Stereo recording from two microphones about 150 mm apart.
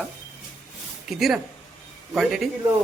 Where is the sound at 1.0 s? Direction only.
Centre (ahead or behind).